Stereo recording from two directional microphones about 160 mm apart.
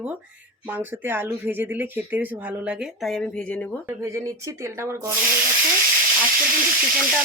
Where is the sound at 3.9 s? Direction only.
15° right (ahead or behind).